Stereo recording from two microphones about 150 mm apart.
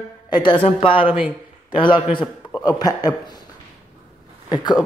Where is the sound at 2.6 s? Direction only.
25° left (ahead or behind).